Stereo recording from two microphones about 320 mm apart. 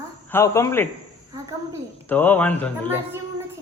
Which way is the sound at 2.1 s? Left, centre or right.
Centre.